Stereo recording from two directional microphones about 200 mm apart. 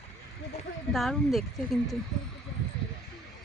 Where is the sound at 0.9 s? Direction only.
Centre (ahead or behind).